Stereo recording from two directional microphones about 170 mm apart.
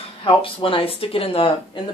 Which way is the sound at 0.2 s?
30° left (ahead or behind).